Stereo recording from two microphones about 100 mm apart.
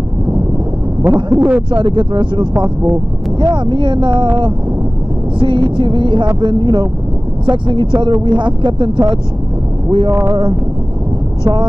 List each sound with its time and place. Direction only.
1.0 s speech: 20° right (ahead or behind)
1.7 s music: 50° right (ahead or behind)
5.4 s music: 55° right (ahead or behind)
8.6 s speech: 55° right (ahead or behind)
9.8 s speech: 40° right (ahead or behind)
10.2 s music: 50° right (ahead or behind)